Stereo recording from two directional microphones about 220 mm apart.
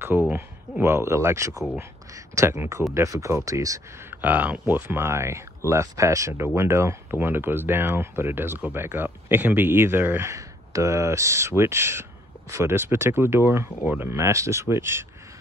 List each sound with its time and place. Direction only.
0.0 s speech: 10° right (ahead or behind)